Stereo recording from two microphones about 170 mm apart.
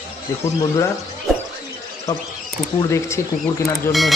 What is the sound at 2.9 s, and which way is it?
Speech, 15° left (ahead or behind).